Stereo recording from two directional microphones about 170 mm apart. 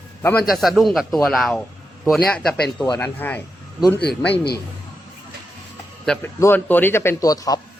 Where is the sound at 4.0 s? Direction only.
70° left (ahead or behind).